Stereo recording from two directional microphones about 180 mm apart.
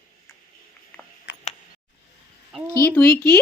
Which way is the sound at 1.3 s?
90° left.